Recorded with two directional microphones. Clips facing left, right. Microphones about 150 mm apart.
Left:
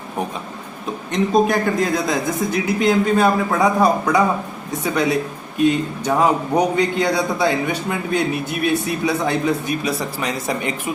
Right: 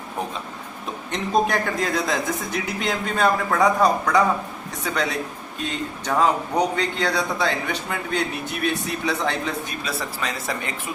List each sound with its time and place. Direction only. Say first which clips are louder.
1.1 s a man's voice: left 5 dB; centre (ahead or behind); by 10.8 s 20° left (ahead or behind)